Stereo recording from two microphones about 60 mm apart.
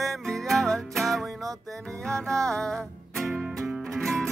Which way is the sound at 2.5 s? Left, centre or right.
Centre.